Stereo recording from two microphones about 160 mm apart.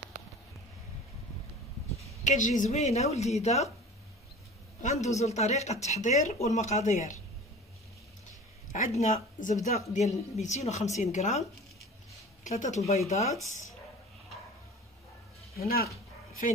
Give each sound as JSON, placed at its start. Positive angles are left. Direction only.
{"t": 2.2, "sound": "speech", "side_deg": 50}
{"t": 4.8, "sound": "speech", "side_deg": 45}
{"t": 8.7, "sound": "speech", "side_deg": 45}
{"t": 12.4, "sound": "speech", "side_deg": 50}
{"t": 15.5, "sound": "speech", "side_deg": 75}